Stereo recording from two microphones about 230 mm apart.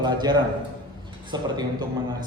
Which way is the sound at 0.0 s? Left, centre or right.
Centre.